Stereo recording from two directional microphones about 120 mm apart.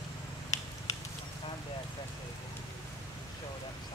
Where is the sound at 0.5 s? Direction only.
25° left (ahead or behind).